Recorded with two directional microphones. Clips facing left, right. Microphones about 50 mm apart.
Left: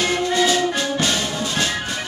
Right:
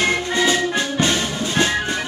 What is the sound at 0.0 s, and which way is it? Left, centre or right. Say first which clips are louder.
Music: even; right.